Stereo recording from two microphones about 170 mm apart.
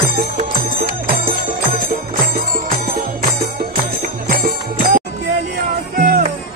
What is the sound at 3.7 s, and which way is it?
Music, 60° right (ahead or behind).